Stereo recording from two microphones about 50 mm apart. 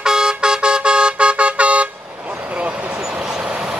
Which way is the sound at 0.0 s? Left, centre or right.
Centre.